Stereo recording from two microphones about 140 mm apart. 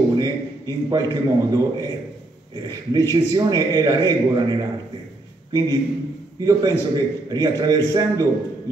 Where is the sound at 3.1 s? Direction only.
30° right (ahead or behind).